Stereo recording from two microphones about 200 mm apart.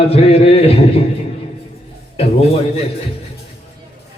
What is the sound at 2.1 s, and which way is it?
Mantra, 30° left (ahead or behind).